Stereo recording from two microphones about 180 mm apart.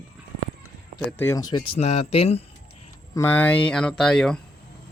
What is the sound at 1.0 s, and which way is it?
Speech, 10° left (ahead or behind).